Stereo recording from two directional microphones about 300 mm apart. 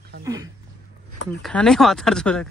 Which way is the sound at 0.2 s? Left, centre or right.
Centre.